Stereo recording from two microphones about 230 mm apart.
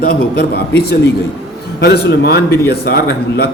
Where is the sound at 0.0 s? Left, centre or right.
Left.